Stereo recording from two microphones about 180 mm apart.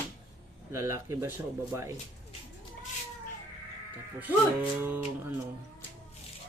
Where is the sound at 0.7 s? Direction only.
15° right (ahead or behind).